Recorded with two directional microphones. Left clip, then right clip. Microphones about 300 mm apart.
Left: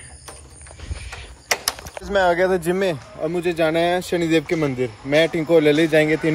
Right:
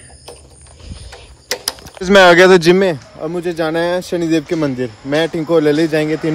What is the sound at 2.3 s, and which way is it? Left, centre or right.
Speech, right.